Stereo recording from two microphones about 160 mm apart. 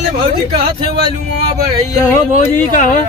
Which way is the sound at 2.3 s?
50° left (ahead or behind).